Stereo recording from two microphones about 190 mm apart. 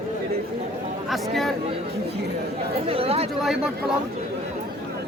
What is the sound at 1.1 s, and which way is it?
Speech, centre (ahead or behind).